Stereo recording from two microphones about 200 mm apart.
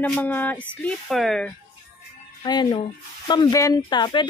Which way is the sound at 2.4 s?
20° left (ahead or behind).